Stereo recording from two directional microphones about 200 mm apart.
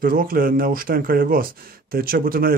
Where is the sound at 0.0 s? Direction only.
45° right (ahead or behind).